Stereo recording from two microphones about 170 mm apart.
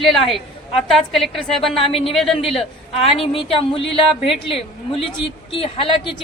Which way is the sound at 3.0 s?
35° left (ahead or behind).